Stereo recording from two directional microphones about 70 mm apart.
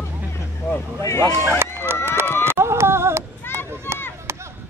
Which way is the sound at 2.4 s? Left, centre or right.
Right.